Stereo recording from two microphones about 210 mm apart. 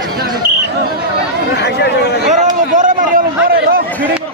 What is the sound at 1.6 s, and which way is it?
Chatter, 55° left (ahead or behind).